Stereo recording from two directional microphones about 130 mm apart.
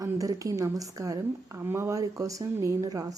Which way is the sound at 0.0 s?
25° right (ahead or behind).